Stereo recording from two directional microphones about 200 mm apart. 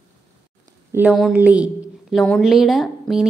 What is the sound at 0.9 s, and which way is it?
A woman's voice, 5° right (ahead or behind).